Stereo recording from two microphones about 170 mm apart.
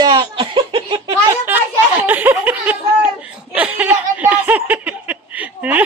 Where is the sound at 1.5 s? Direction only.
10° right (ahead or behind).